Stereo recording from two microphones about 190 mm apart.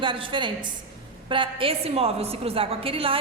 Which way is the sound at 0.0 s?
25° right (ahead or behind).